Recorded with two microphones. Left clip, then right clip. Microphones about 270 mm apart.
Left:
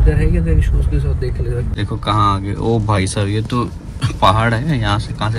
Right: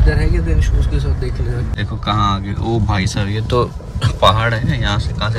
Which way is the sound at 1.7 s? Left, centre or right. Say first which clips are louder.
Left 2 dB; centre.